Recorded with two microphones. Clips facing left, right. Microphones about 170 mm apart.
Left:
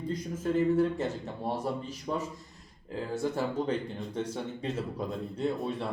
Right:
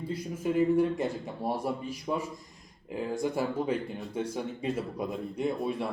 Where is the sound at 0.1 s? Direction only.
10° right (ahead or behind).